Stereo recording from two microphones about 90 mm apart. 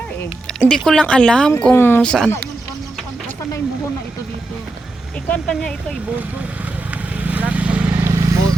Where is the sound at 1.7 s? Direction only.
25° left (ahead or behind).